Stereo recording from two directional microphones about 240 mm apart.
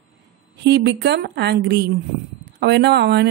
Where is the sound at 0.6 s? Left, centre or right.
Right.